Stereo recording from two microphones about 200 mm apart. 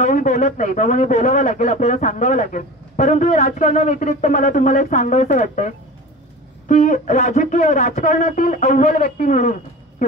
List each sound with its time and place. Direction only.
0.0 s a man's voice: 35° left (ahead or behind)
6.7 s a man's voice: 35° left (ahead or behind)